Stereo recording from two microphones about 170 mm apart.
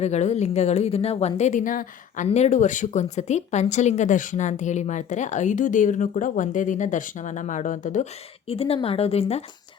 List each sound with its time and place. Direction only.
0.0 s speech: 40° left (ahead or behind)
8.4 s speech: 35° left (ahead or behind)